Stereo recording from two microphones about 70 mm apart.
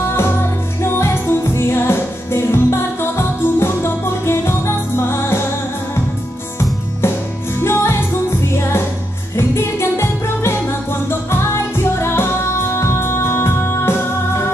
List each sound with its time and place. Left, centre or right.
0.1 s music: left
7.6 s music: left